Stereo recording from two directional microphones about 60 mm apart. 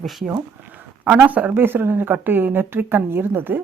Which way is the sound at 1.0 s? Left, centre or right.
Right.